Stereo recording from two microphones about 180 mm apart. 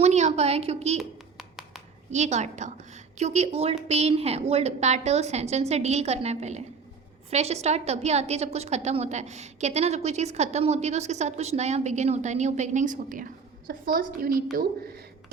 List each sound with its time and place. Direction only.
0.0 s a woman's voice: 40° right (ahead or behind)
0.9 s hands: centre (ahead or behind)
2.0 s a woman's voice: 40° right (ahead or behind)